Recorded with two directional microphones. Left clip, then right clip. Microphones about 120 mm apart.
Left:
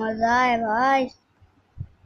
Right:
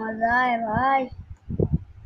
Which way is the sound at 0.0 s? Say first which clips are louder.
Left 1 dB; 25° left (ahead or behind).